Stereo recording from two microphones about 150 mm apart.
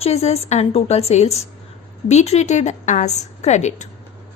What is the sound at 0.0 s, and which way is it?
A woman's voice, 45° left (ahead or behind).